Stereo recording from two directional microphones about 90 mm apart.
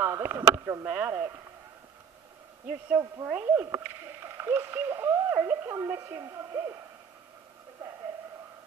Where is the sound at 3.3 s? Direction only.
15° right (ahead or behind).